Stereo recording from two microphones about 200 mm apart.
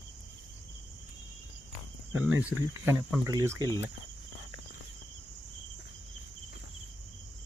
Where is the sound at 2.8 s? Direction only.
10° right (ahead or behind).